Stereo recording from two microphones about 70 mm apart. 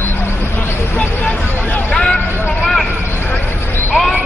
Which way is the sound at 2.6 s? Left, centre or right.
Centre.